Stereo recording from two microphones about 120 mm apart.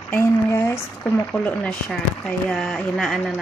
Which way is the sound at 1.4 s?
10° left (ahead or behind).